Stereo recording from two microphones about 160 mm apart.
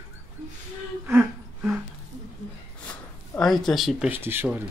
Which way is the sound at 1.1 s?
15° right (ahead or behind).